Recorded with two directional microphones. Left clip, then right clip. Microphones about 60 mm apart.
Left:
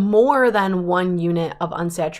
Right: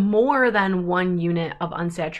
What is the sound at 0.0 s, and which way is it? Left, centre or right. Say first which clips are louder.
Speech: left 3 dB; left.